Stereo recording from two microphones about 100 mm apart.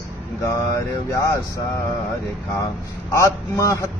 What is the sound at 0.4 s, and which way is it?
Speech, 30° left (ahead or behind).